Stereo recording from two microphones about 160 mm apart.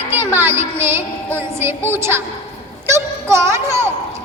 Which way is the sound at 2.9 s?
15° right (ahead or behind).